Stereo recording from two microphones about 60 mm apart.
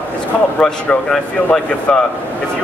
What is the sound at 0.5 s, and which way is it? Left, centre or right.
Speech, centre.